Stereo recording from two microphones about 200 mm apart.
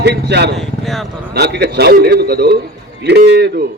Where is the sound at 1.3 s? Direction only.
55° right (ahead or behind).